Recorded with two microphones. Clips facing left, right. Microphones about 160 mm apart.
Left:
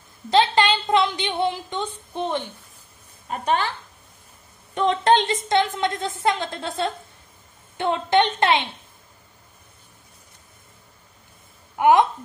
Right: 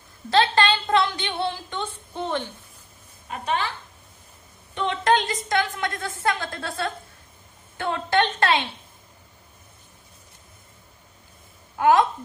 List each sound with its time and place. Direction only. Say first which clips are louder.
0.3 s a woman's voice: left 1 dB; 15° left (ahead or behind)
3.3 s a woman's voice: left 4 dB; 40° left (ahead or behind)
4.8 s a woman's voice: left 3 dB; 30° left (ahead or behind)
11.7 s a woman's voice: left 2 dB; 20° left (ahead or behind)